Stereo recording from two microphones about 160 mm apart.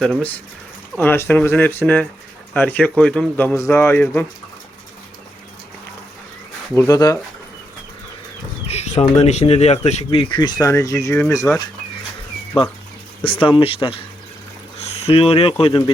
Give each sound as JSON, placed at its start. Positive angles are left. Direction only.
{"t": 0.0, "sound": "speech", "side_deg": 5}
{"t": 6.7, "sound": "speech", "side_deg": 20}
{"t": 8.6, "sound": "speech", "side_deg": 45}
{"t": 12.5, "sound": "speech", "side_deg": 35}